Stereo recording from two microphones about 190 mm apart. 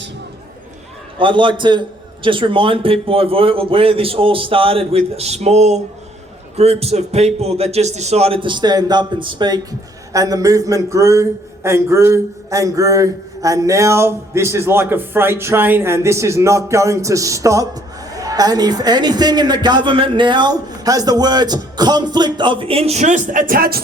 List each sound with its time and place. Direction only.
1.2 s a man's voice: 25° right (ahead or behind); by 23.8 s 50° right (ahead or behind)